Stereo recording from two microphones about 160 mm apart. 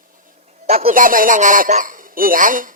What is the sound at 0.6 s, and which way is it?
Speech, 40° right (ahead or behind).